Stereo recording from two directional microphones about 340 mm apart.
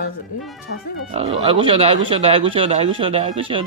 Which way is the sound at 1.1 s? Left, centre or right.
Centre.